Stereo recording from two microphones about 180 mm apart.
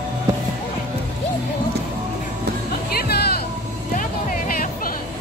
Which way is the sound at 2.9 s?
60° left (ahead or behind).